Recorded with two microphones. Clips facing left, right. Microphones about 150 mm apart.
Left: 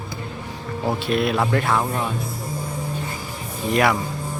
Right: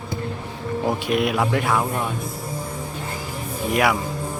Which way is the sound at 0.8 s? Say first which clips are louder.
Left 1 dB; 15° right (ahead or behind).